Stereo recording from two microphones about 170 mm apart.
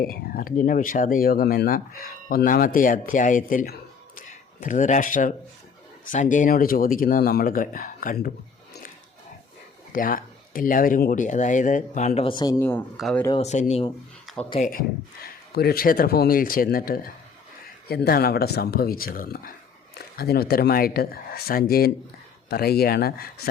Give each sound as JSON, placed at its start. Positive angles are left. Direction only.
{"t": 0.0, "sound": "speech", "side_deg": 60}
{"t": 9.9, "sound": "speech", "side_deg": 55}
{"t": 12.5, "sound": "speech", "side_deg": 10}
{"t": 13.3, "sound": "speech", "side_deg": 40}
{"t": 14.5, "sound": "speech", "side_deg": 55}